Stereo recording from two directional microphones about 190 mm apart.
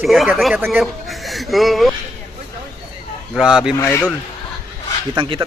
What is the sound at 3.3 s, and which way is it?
Speech, 5° right (ahead or behind).